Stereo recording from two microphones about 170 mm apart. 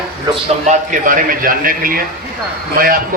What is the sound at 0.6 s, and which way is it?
A man's voice, 50° right (ahead or behind).